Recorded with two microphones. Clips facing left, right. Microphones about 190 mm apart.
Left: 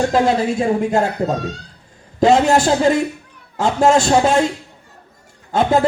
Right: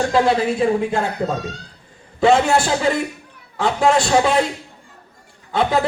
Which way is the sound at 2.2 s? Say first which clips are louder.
Left 2 dB; 40° left (ahead or behind).